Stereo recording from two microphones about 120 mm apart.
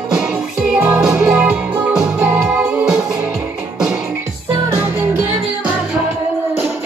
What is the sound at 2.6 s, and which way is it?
Music, 5° right (ahead or behind).